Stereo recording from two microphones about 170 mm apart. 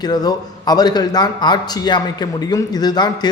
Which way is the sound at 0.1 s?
25° left (ahead or behind).